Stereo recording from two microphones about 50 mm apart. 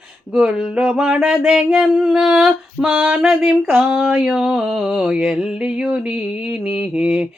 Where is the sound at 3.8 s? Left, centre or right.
Right.